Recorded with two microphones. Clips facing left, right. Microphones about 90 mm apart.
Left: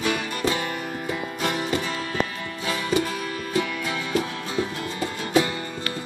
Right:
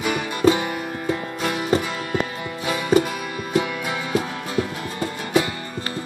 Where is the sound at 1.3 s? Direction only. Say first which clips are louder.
Right 1 dB; centre (ahead or behind).